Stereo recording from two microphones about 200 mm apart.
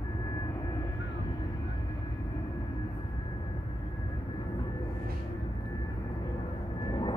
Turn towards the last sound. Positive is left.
turn(degrees=20)  # may be behind; listen again after turning